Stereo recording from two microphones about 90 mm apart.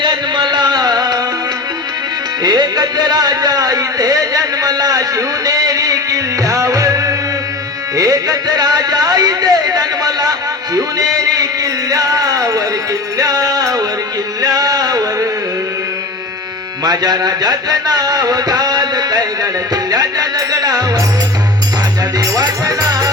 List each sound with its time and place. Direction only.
0.0 s music: 55° right (ahead or behind)
2.4 s music: 50° right (ahead or behind)
14.4 s a sound: 45° right (ahead or behind)
16.8 s music: 45° right (ahead or behind)
22.2 s music: 45° right (ahead or behind)